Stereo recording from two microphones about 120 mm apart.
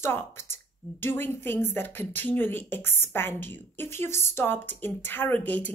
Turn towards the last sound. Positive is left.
turn(degrees=15)  # may be behind; listen again after turning